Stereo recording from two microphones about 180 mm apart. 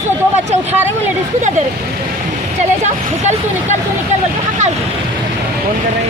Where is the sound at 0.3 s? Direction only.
40° right (ahead or behind).